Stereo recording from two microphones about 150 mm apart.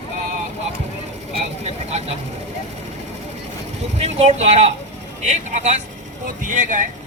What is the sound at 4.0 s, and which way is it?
Speech, 45° right (ahead or behind).